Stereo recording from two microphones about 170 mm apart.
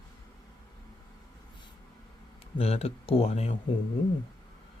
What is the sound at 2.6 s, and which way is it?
Speech, 35° left (ahead or behind).